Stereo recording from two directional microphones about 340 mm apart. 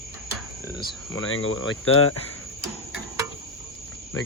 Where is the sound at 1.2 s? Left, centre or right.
Left.